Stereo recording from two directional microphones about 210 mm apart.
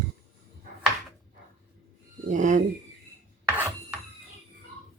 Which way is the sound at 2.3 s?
35° right (ahead or behind).